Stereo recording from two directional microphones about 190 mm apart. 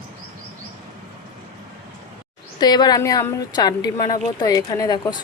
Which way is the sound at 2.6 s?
20° left (ahead or behind).